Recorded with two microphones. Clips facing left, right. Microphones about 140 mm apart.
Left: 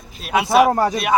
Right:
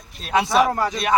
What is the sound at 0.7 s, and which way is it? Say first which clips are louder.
Speech: left 5 dB; 45° left (ahead or behind).